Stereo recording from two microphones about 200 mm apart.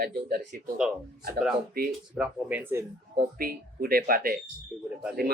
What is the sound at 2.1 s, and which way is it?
Speech, 5° right (ahead or behind).